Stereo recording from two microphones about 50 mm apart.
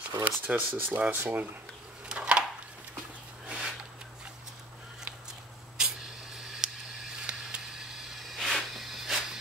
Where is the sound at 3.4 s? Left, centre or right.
Centre.